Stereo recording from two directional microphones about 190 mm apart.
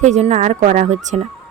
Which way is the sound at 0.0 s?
35° right (ahead or behind).